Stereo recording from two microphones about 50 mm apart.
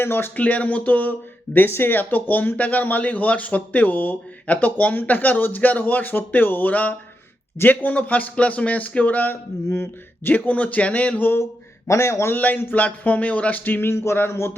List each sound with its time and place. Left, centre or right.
0.0 s speech: left
0.3 s speech: left
1.5 s speech: left
9.6 s speech: left
10.2 s speech: left
11.9 s a man's voice: left
12.3 s speech: left
13.9 s a sound: left
14.3 s speech: left